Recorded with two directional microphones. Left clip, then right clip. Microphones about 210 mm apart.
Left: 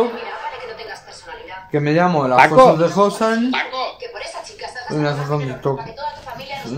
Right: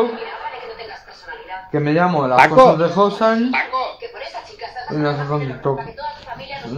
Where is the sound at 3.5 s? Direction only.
25° left (ahead or behind).